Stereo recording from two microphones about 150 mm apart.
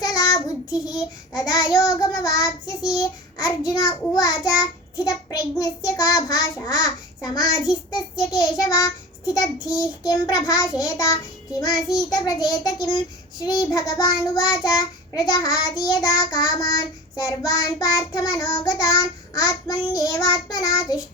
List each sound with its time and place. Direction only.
0.0 s child singing: 25° left (ahead or behind)
8.1 s a child's voice: 5° right (ahead or behind)
8.4 s child singing: 25° left (ahead or behind)